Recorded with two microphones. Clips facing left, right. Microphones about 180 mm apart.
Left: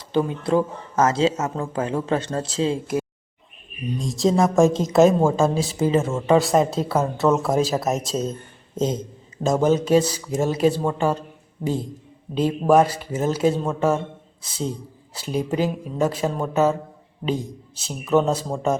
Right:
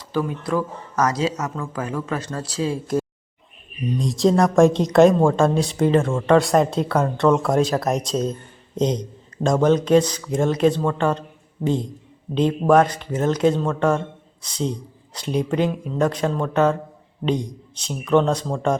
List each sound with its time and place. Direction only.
0.1 s speech: 25° left (ahead or behind)
4.0 s speech: centre (ahead or behind)